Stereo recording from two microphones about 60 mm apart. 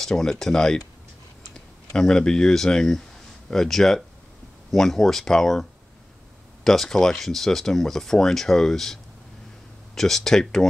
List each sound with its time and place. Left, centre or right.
0.0 s speech: centre